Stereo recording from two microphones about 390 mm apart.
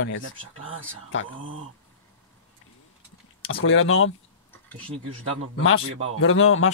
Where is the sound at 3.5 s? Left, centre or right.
Left.